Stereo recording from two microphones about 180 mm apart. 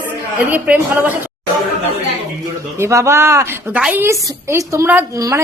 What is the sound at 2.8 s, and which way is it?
A woman's voice, 15° right (ahead or behind).